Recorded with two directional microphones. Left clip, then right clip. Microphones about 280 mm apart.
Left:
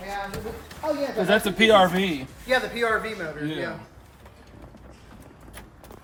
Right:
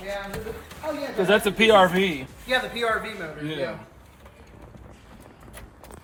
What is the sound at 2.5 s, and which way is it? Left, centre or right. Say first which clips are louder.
Speech: left 1 dB; centre.